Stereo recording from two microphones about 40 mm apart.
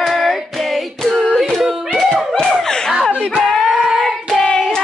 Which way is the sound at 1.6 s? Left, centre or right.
Centre.